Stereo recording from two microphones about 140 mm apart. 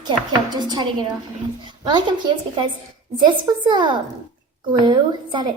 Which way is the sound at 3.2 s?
35° right (ahead or behind).